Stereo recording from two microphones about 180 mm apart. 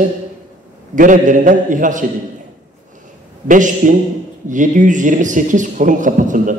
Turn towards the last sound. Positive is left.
turn(degrees=-45)  # may be behind; listen again after turning